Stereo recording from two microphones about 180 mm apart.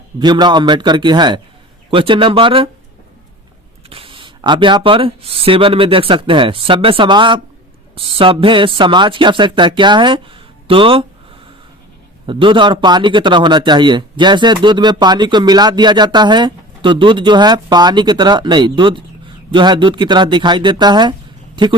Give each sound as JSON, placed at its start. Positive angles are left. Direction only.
{"t": 0.2, "sound": "a man's voice", "side_deg": -25}
{"t": 3.8, "sound": "a man's voice", "side_deg": -30}
{"t": 12.2, "sound": "a man's voice", "side_deg": -30}